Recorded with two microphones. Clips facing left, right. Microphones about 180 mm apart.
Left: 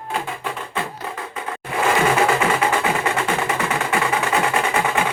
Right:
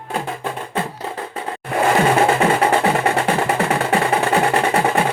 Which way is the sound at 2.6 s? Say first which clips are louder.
Right 4 dB; 35° right (ahead or behind).